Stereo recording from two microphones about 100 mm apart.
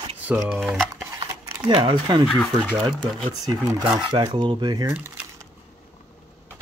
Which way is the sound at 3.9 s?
60° right (ahead or behind).